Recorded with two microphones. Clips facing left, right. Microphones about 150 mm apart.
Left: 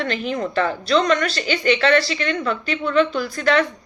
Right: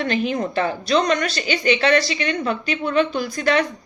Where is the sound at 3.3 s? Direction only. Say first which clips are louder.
Left 1 dB; 20° right (ahead or behind).